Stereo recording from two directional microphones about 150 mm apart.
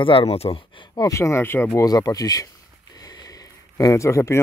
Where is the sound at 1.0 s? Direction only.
20° left (ahead or behind).